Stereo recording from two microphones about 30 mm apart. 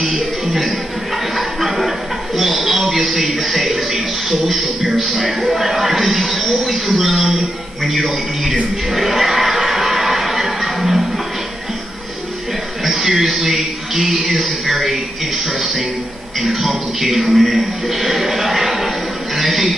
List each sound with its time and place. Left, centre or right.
0.0 s music: centre
1.3 s a sound: centre
2.9 s a man's voice: centre
8.9 s a sound: centre
12.8 s a man's voice: centre
16.3 s a man's voice: centre